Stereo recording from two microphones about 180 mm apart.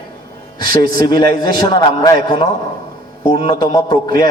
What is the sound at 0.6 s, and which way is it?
A man's voice, 25° left (ahead or behind).